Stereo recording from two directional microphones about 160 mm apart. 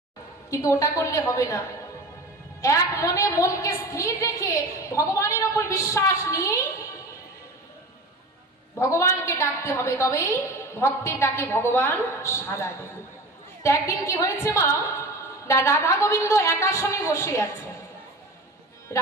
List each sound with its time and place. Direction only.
0.5 s a woman's voice: 20° left (ahead or behind)
8.8 s a woman's voice: 20° left (ahead or behind)
18.9 s speech: 20° left (ahead or behind)